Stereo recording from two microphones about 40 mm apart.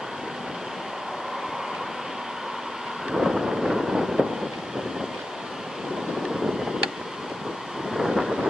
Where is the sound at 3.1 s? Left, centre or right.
Centre.